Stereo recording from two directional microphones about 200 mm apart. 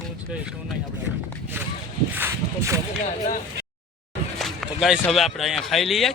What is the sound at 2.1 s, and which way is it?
Speech, 10° right (ahead or behind).